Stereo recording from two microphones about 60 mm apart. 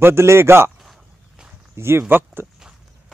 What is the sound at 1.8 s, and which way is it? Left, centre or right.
Speech, right.